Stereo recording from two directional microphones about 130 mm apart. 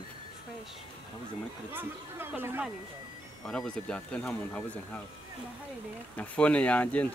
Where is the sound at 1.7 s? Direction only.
15° right (ahead or behind).